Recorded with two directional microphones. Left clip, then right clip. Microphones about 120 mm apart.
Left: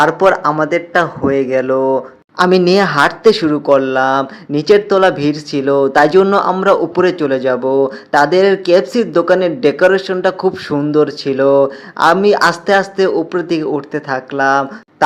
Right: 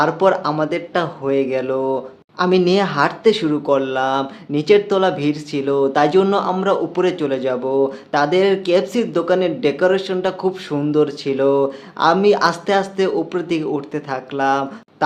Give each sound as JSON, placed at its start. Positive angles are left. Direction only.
{"t": 0.0, "sound": "speech", "side_deg": 35}
{"t": 2.4, "sound": "speech", "side_deg": 50}